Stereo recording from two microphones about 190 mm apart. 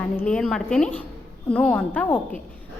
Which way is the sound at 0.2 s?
5° left (ahead or behind).